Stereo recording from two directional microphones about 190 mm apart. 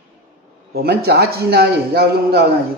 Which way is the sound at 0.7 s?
55° right (ahead or behind).